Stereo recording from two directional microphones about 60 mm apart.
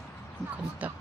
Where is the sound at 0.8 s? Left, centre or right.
Right.